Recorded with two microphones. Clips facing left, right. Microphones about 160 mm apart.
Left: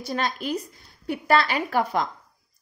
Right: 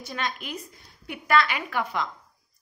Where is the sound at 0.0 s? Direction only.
35° left (ahead or behind).